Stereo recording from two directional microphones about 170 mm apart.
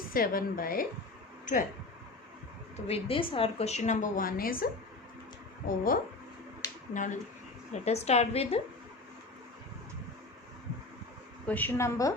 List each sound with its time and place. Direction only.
0.1 s a woman's voice: 60° left (ahead or behind)
2.8 s a woman's voice: 35° left (ahead or behind); by 4.5 s 55° left (ahead or behind)
5.6 s a woman's voice: 55° left (ahead or behind); by 8.6 s 35° left (ahead or behind)
11.4 s a woman's voice: 10° left (ahead or behind)